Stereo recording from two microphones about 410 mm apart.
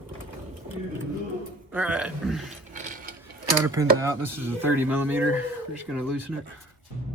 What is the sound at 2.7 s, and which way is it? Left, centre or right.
Ratchet, centre.